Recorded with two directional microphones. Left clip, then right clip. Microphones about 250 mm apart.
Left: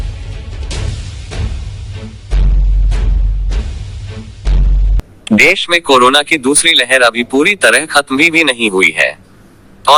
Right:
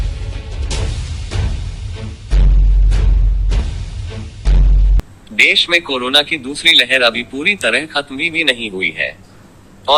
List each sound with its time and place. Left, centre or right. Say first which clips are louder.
4.9 s speech: left 3 dB; centre